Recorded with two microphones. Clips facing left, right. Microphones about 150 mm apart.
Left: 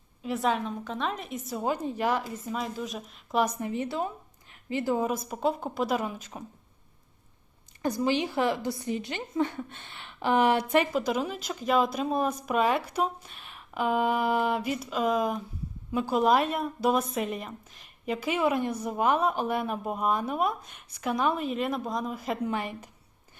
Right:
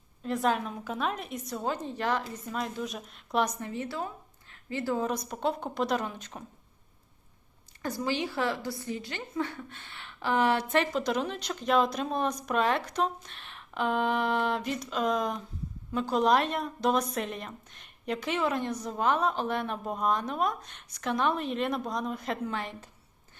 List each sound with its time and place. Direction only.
0.2 s a woman's voice: centre (ahead or behind)
1.6 s a woman's voice: 10° left (ahead or behind)
3.6 s a woman's voice: 15° left (ahead or behind)
5.0 s a woman's voice: 5° left (ahead or behind)
7.8 s a woman's voice: 20° left (ahead or behind)